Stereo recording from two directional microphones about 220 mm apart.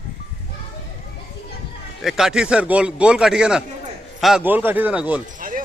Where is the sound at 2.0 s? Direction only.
Centre (ahead or behind).